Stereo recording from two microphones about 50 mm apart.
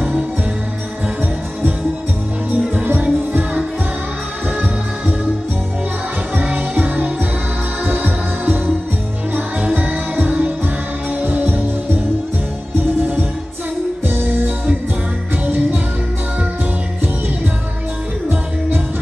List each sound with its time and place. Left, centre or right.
2.5 s music: right
6.3 s music: right
9.8 s music: right
14.0 s music: right
15.4 s music: right